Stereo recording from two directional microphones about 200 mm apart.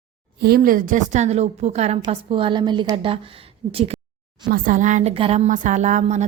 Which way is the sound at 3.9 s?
30° right (ahead or behind).